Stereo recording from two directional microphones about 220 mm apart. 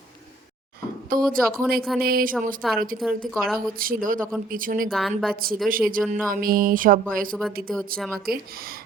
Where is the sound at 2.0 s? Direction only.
40° right (ahead or behind).